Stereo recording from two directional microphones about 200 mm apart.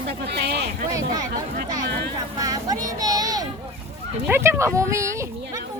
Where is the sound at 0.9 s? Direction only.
20° right (ahead or behind).